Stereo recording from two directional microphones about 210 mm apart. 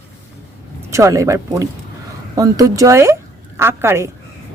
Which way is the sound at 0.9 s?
15° right (ahead or behind).